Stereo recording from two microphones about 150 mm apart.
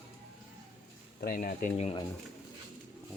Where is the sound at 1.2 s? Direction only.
65° left (ahead or behind).